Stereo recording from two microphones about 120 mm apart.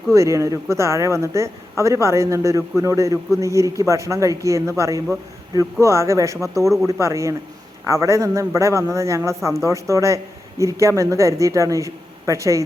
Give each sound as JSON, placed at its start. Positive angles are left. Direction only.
{"t": 0.1, "sound": "a man's voice", "side_deg": -25}